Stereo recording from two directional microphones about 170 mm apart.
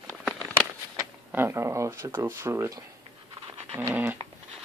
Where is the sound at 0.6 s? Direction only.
10° right (ahead or behind).